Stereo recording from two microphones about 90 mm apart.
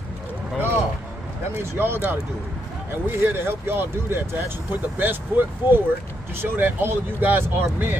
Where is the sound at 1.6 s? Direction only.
25° right (ahead or behind).